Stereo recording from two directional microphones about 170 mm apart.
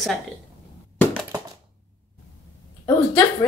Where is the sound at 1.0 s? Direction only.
10° left (ahead or behind).